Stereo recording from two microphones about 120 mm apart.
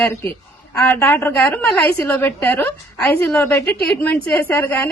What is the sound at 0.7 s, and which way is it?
A woman's voice, 10° left (ahead or behind).